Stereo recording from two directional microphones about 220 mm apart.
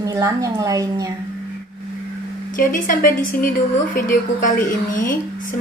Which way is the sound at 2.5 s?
35° left (ahead or behind).